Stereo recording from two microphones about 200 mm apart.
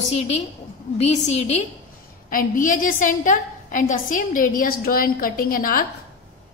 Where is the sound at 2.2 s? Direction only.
45° left (ahead or behind).